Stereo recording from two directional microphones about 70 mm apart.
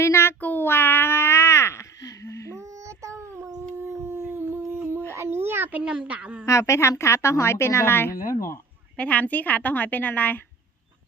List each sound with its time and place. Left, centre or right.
0.0 s child singing: left
0.4 s a sound: left
2.0 s a sound: left
2.6 s child singing: right
3.6 s howl: right
4.3 s dog: right
4.8 s a sound: right
5.8 s speech: centre
6.4 s a woman's voice: left
9.0 s a woman's voice: centre